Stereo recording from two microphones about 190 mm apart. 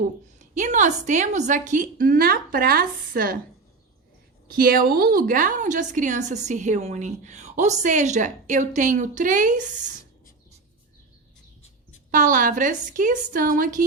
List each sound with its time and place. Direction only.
0.0 s a woman's voice: 40° right (ahead or behind)
4.5 s a woman's voice: 50° right (ahead or behind)
12.1 s a woman's voice: 45° right (ahead or behind)